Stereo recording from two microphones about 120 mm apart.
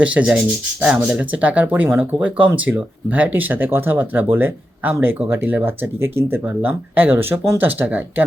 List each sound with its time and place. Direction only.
0.0 s speech: 10° right (ahead or behind)